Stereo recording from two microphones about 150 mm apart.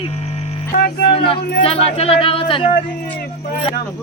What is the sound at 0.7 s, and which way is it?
Music, 90° left.